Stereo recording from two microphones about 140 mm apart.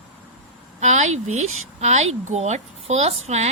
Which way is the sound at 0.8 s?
55° right (ahead or behind).